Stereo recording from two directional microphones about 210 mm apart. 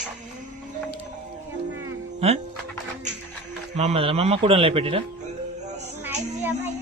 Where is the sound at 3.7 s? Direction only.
30° right (ahead or behind).